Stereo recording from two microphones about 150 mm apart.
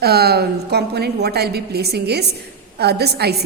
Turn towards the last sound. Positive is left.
turn(degrees=-90)